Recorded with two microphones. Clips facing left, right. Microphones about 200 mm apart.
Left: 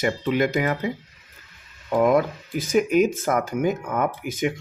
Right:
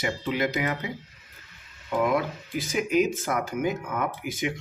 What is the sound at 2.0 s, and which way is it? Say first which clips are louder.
Speech: left 6 dB; 45° left (ahead or behind).